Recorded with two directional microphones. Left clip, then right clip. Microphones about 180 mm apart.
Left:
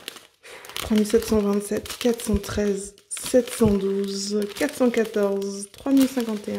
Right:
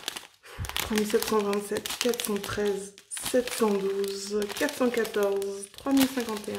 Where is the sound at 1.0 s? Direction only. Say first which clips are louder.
Left 5 dB; 35° left (ahead or behind).